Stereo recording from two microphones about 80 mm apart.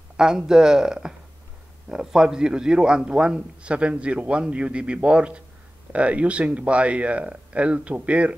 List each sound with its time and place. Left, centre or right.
0.2 s a man's voice: centre